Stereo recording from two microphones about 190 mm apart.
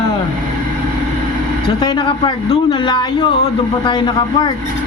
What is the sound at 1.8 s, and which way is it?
A man's voice, 25° left (ahead or behind).